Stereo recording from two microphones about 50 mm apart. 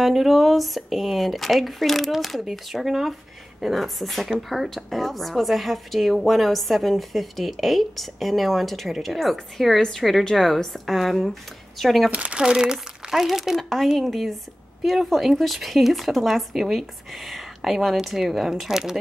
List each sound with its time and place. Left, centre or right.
0.0 s a woman's voice: centre
12.1 s speech: right
12.4 s a woman's voice: centre